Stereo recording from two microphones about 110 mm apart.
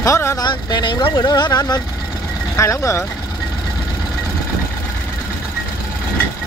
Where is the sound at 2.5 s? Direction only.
25° left (ahead or behind).